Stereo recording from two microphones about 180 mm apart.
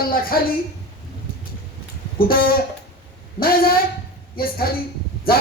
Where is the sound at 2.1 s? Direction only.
55° left (ahead or behind).